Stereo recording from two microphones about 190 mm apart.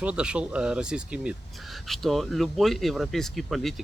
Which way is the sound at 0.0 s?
5° right (ahead or behind).